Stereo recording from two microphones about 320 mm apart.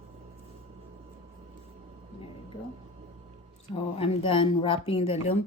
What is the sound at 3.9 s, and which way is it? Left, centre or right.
Speech, centre.